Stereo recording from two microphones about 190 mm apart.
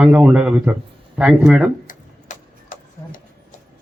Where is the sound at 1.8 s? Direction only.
45° left (ahead or behind).